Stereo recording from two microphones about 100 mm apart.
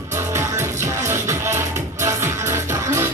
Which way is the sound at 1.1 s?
30° right (ahead or behind).